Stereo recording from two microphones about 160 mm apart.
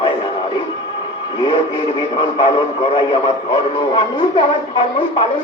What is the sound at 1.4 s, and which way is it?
A man's voice, 30° left (ahead or behind).